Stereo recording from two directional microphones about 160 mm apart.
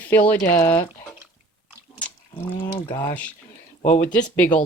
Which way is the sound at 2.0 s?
10° left (ahead or behind).